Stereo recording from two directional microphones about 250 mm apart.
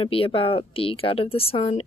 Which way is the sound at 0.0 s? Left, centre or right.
Left.